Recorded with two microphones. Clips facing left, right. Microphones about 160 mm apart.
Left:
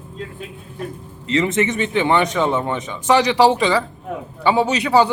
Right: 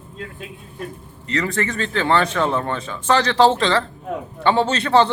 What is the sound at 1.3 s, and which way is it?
Speech, 20° left (ahead or behind).